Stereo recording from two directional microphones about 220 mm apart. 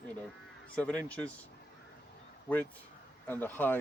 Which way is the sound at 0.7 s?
5° left (ahead or behind).